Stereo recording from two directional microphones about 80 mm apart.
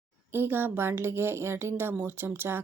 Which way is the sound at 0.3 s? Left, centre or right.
Right.